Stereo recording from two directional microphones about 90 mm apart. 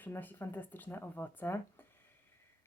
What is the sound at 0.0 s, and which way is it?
Speech, 20° left (ahead or behind).